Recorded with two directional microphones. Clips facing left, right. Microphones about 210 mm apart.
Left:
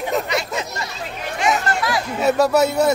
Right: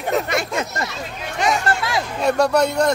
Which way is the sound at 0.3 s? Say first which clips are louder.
Right 1 dB; 50° right (ahead or behind).